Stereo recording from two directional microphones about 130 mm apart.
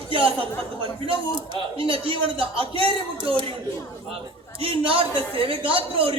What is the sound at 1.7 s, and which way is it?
A man's voice, 45° right (ahead or behind).